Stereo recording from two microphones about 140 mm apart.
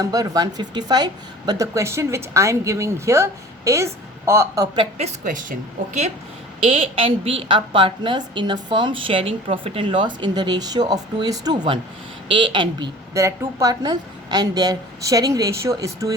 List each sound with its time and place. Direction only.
0.0 s a woman's voice: 25° right (ahead or behind)
4.9 s speech: 60° right (ahead or behind)
6.6 s a woman's voice: 40° right (ahead or behind)
13.1 s a woman's voice: 20° right (ahead or behind)